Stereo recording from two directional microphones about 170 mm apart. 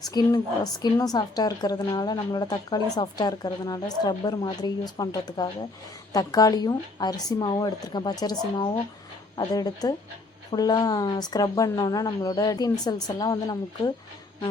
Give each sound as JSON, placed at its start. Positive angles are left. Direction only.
{"t": 0.1, "sound": "a woman's voice", "side_deg": 20}